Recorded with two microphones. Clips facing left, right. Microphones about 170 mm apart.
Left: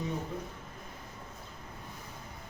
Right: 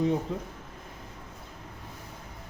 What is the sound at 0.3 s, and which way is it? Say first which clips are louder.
Speech: right 5 dB; 90° right.